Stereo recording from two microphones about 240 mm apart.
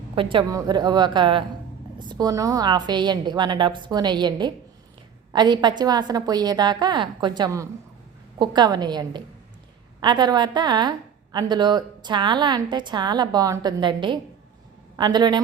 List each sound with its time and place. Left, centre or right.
0.2 s a woman's voice: right